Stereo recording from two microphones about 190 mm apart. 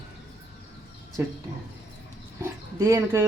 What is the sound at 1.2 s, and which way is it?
Speech, 10° right (ahead or behind).